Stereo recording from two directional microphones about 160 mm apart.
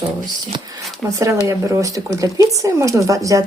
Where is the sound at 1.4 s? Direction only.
20° right (ahead or behind).